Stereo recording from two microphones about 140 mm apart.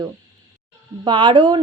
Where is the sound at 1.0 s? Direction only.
35° right (ahead or behind).